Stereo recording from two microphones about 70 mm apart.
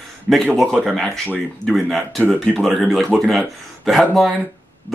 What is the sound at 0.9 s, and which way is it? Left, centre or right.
Speech, centre.